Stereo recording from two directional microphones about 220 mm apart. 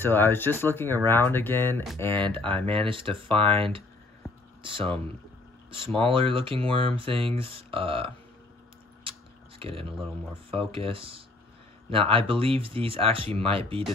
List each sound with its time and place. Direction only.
0.0 s speech: 10° left (ahead or behind)
2.3 s speech: 25° right (ahead or behind)
9.6 s speech: 25° right (ahead or behind)